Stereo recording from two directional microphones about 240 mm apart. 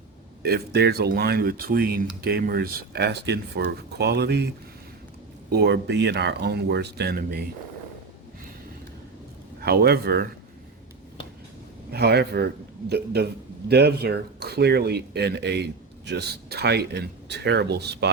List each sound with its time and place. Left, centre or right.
0.4 s speech: right
9.6 s speech: right
11.9 s speech: right